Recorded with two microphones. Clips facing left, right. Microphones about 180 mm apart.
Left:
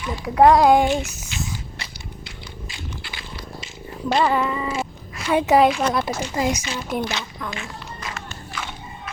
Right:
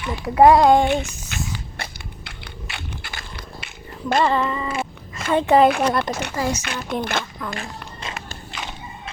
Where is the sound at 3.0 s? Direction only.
45° right (ahead or behind).